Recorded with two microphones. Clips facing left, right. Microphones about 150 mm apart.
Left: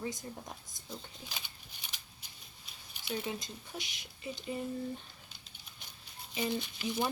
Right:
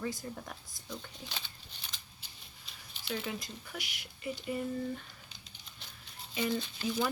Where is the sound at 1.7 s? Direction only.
10° left (ahead or behind).